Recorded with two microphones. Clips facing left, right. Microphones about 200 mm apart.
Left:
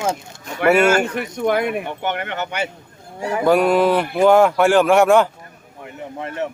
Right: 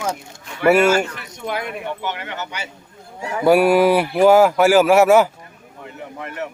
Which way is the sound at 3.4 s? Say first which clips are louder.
Right 2 dB; 10° right (ahead or behind).